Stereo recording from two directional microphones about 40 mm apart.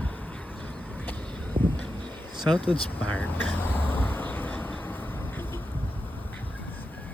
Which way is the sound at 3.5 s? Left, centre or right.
Left.